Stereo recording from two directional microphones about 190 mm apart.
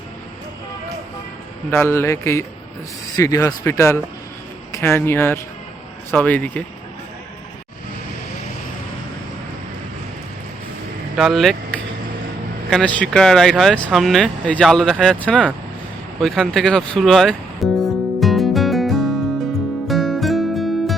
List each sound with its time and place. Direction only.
1.7 s speech: 10° left (ahead or behind)
11.2 s speech: centre (ahead or behind)
16.2 s music: centre (ahead or behind)